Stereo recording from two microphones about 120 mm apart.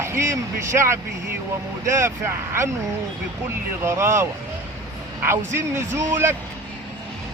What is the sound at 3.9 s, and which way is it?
Speech, 25° right (ahead or behind).